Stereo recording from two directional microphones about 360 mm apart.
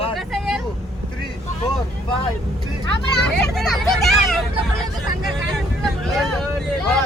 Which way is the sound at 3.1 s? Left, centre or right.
Centre.